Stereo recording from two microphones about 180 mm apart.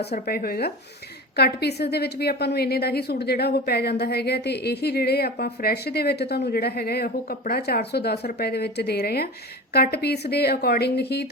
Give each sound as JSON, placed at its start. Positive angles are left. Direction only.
{"t": 0.0, "sound": "a woman's voice", "side_deg": 60}